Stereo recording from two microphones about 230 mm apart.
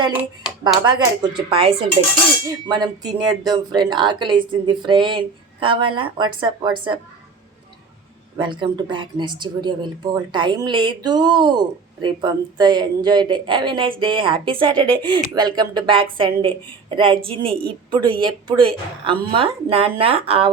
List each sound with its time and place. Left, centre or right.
0.1 s speech: centre
0.9 s speech: centre
8.4 s speech: right